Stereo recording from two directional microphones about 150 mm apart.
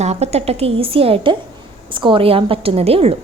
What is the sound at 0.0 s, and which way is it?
A woman's voice, 45° right (ahead or behind).